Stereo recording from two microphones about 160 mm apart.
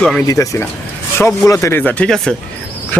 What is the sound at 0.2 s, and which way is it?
Speech, 20° left (ahead or behind).